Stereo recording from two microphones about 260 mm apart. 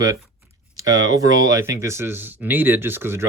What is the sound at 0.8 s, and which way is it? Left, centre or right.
Speech, centre.